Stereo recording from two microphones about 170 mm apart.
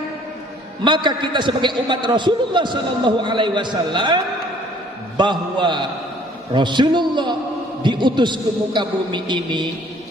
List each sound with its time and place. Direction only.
0.8 s a man's voice: 30° right (ahead or behind)